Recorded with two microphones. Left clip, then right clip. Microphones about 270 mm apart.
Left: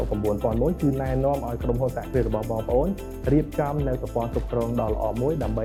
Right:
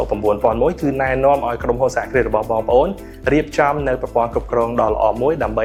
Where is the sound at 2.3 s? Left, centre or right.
Right.